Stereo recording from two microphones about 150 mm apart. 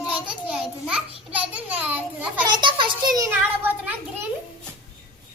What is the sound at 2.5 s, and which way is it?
Speech, 30° right (ahead or behind).